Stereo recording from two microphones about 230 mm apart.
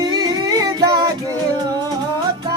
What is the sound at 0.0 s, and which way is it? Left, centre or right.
Singing, centre.